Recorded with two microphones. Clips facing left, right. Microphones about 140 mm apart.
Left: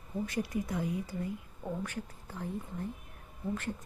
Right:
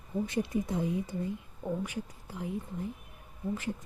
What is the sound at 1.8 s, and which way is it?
Speech, 15° right (ahead or behind).